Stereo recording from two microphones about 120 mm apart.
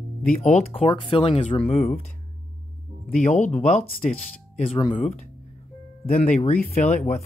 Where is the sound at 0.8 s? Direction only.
45° left (ahead or behind).